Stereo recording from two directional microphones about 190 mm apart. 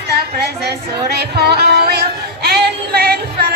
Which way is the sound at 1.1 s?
60° right (ahead or behind).